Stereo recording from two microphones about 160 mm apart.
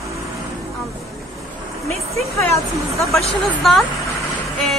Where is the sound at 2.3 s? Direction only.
20° left (ahead or behind).